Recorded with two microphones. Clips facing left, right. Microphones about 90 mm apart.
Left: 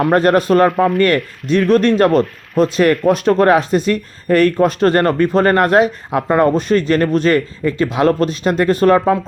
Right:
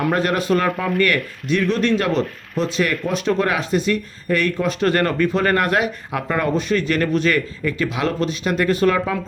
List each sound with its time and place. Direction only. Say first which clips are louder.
0.1 s speech: left 9 dB; 40° left (ahead or behind)